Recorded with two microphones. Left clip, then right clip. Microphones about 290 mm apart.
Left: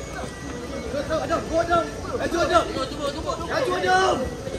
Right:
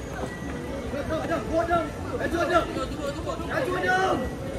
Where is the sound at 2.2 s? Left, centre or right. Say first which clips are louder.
Left 3 dB; centre.